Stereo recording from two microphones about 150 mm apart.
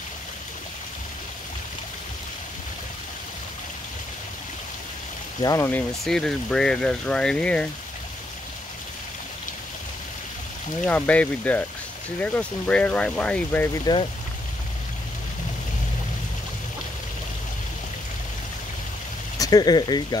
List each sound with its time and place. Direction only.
5.4 s speech: 25° left (ahead or behind)
5.7 s speech: 5° left (ahead or behind)
10.9 s speech: 10° left (ahead or behind)
13.9 s speech: 25° left (ahead or behind)
19.3 s speech: 25° left (ahead or behind)